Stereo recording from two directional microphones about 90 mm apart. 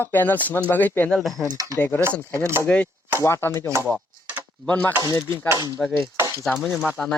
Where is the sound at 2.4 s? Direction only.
30° right (ahead or behind).